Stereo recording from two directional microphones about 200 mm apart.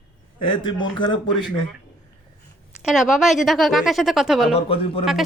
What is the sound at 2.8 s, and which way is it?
Speech, centre (ahead or behind).